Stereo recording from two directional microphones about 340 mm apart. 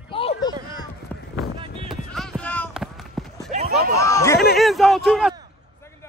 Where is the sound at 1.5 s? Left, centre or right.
Centre.